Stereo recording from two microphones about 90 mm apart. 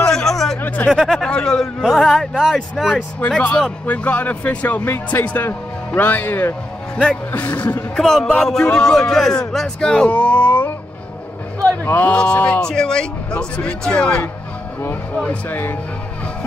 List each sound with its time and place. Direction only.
0.0 s a sound: 5° left (ahead or behind)
0.6 s a sound: 20° left (ahead or behind)
0.8 s a man's voice: centre (ahead or behind)
3.2 s a man's voice: 15° left (ahead or behind)
7.0 s a man's voice: 15° left (ahead or behind)
7.9 s a man's voice: 5° left (ahead or behind)
11.8 s a man's voice: 20° left (ahead or behind)